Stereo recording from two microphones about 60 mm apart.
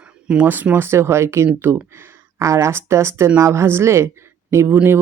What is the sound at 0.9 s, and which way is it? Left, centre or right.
Speech, right.